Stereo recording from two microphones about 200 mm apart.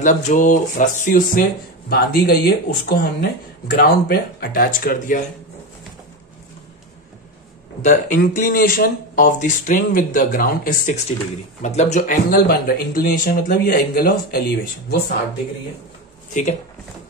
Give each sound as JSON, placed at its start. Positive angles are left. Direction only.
{"t": 0.0, "sound": "speech", "side_deg": 40}
{"t": 7.8, "sound": "speech", "side_deg": 40}
{"t": 16.3, "sound": "speech", "side_deg": 40}